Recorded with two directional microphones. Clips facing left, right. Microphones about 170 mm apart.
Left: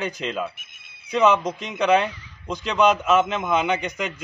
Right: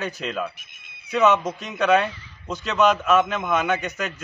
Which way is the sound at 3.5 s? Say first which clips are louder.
Left 1 dB; 20° left (ahead or behind).